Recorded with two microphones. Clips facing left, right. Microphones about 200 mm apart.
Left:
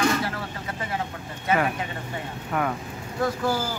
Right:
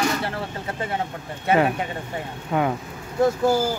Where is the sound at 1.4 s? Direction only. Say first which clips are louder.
Right 4 dB; 30° right (ahead or behind).